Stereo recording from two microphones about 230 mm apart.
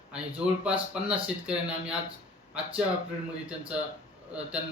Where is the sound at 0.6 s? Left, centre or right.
Centre.